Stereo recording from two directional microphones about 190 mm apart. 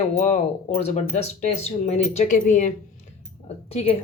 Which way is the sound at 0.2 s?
35° left (ahead or behind).